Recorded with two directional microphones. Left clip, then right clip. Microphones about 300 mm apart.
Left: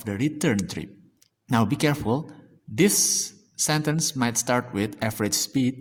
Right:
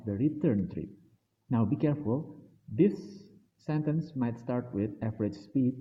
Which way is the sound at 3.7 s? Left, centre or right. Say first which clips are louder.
Left 8 dB; left.